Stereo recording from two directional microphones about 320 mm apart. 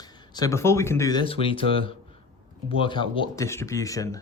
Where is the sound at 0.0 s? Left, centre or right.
Centre.